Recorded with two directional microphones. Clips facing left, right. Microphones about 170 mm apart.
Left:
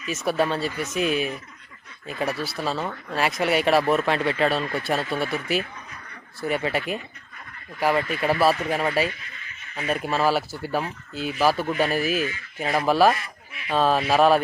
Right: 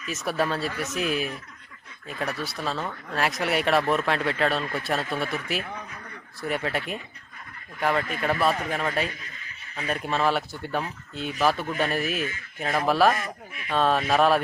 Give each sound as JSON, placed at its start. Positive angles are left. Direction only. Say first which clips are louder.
{"t": 0.0, "sound": "speech", "louder": "left 3 dB", "side_deg": 0}
{"t": 9.0, "sound": "snicker", "louder": "left 4 dB", "side_deg": -40}
{"t": 9.7, "sound": "speech", "louder": "left 3 dB", "side_deg": 5}
{"t": 13.1, "sound": "speech", "louder": "right 5 dB", "side_deg": -45}
{"t": 13.7, "sound": "speech", "louder": "left 2 dB", "side_deg": 0}